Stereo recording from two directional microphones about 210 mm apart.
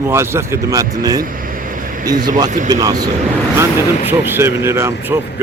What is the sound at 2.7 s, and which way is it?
Speech, 20° right (ahead or behind).